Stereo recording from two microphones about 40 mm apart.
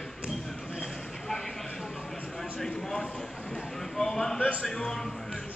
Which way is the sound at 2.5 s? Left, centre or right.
Centre.